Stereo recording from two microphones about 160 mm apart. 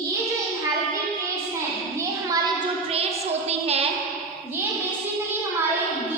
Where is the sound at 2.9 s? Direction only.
40° right (ahead or behind).